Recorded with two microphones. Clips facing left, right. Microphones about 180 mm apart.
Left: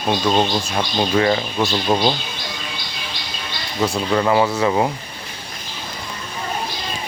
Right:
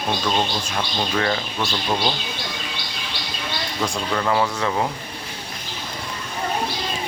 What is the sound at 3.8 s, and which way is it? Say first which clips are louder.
Speech: left 6 dB; 10° left (ahead or behind).